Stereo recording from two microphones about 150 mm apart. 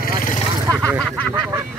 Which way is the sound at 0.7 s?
20° right (ahead or behind).